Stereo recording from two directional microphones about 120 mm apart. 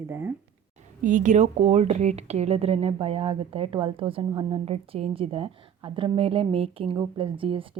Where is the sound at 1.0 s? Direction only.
90° right.